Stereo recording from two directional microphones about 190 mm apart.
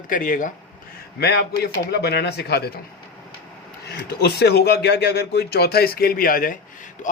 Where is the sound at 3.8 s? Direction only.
60° left (ahead or behind).